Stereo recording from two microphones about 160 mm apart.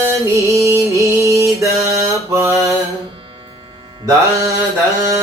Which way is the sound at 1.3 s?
20° right (ahead or behind).